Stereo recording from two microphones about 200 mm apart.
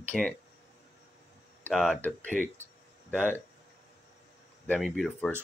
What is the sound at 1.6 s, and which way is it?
Speech, 5° left (ahead or behind).